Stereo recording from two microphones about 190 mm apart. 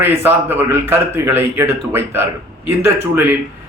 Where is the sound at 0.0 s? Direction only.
10° right (ahead or behind).